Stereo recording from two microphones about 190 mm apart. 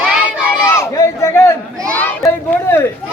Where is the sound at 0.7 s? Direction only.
15° left (ahead or behind).